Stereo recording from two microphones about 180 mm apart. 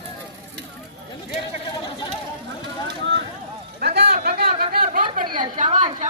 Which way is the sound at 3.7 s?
60° right (ahead or behind).